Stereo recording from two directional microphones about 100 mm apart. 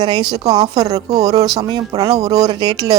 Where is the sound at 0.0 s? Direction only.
50° right (ahead or behind).